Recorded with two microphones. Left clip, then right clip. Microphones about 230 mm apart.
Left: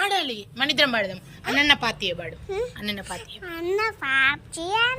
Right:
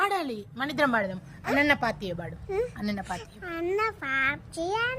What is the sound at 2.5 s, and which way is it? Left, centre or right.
A woman's voice, right.